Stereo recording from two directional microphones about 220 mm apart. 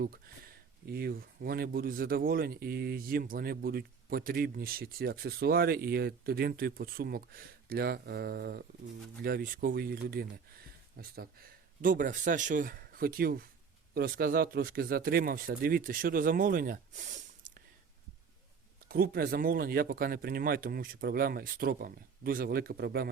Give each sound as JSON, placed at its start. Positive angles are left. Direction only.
{"t": 0.9, "sound": "speech", "side_deg": -45}
{"t": 18.9, "sound": "speech", "side_deg": -45}